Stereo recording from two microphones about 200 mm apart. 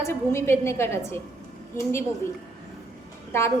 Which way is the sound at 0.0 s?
15° left (ahead or behind).